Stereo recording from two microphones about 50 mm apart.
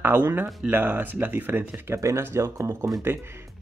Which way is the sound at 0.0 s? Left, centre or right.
Right.